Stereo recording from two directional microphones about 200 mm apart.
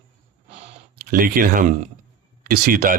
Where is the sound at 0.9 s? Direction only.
45° right (ahead or behind).